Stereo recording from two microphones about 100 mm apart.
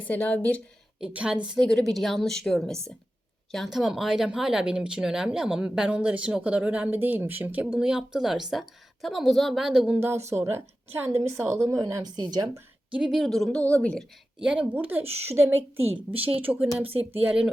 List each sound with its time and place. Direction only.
0.1 s speech: 15° left (ahead or behind)
0.9 s speech: 10° right (ahead or behind)
1.6 s a woman's voice: centre (ahead or behind)
10.2 s a woman's voice: 25° right (ahead or behind)
12.0 s speech: 45° right (ahead or behind)
12.9 s a woman's voice: 5° right (ahead or behind)
13.6 s speech: 15° left (ahead or behind)
14.3 s speech: 10° right (ahead or behind)
15.0 s speech: 90° right
16.0 s a woman's voice: 70° right (ahead or behind)
16.4 s speech: 15° right (ahead or behind)
16.8 s a woman's voice: 75° right (ahead or behind)
17.2 s speech: 10° right (ahead or behind)